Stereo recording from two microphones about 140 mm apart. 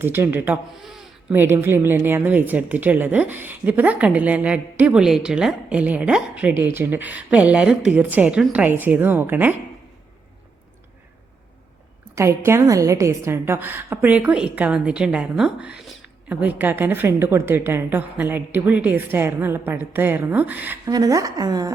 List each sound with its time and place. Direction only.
0.0 s a woman's voice: 15° right (ahead or behind)
0.8 s speech: centre (ahead or behind)
1.3 s a woman's voice: 15° right (ahead or behind)
12.1 s a woman's voice: 20° right (ahead or behind)
20.8 s a woman's voice: 25° right (ahead or behind)